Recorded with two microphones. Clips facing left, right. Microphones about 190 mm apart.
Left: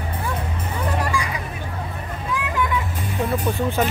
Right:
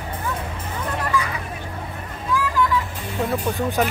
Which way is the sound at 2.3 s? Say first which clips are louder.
Right 5 dB; 20° left (ahead or behind).